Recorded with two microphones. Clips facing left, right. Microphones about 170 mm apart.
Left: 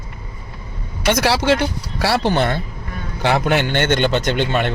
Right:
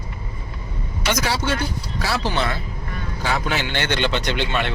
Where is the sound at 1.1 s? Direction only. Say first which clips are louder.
Left 7 dB; 70° left (ahead or behind); by 2.6 s 55° left (ahead or behind).